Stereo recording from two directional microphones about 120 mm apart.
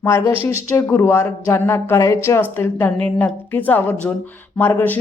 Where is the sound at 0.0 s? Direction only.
20° left (ahead or behind).